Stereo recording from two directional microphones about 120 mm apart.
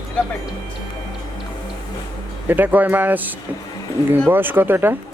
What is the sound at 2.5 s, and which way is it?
Speech, 15° right (ahead or behind).